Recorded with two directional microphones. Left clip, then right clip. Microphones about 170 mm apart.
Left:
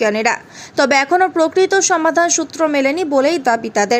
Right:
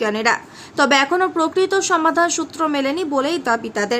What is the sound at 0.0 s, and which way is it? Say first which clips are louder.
A woman's voice: left 3 dB; 20° left (ahead or behind).